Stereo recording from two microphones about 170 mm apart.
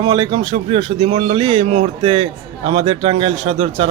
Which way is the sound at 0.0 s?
30° right (ahead or behind).